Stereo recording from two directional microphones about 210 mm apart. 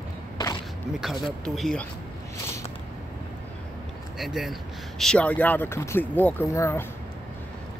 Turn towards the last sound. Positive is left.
turn(degrees=10)  # may be behind; listen again after turning